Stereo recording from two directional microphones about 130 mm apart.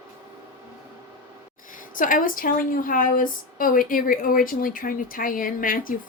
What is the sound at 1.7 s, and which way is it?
A woman's voice, 90° left.